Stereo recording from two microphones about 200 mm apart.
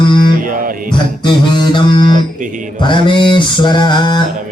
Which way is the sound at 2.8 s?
25° left (ahead or behind).